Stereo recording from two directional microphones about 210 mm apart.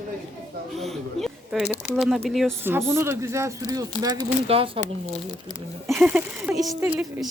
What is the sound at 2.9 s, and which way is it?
Speech, 10° right (ahead or behind).